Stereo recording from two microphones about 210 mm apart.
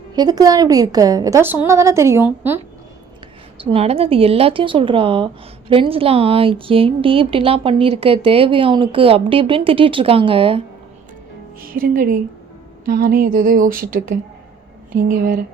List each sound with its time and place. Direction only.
0.2 s a woman's voice: 20° right (ahead or behind)
3.6 s speech: 25° right (ahead or behind)
11.6 s a woman's voice: 45° right (ahead or behind)